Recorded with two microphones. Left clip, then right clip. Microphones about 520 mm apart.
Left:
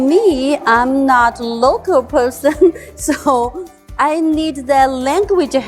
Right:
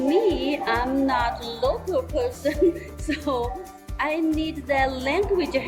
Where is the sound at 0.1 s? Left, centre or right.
Left.